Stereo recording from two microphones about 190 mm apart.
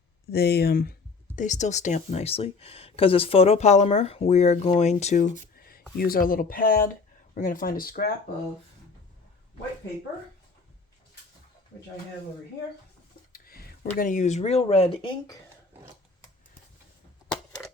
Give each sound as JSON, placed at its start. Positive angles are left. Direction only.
{"t": 0.3, "sound": "speech", "side_deg": 55}
{"t": 1.4, "sound": "speech", "side_deg": 40}
{"t": 6.0, "sound": "speech", "side_deg": 50}
{"t": 13.3, "sound": "a sound", "side_deg": 50}
{"t": 14.0, "sound": "speech", "side_deg": 40}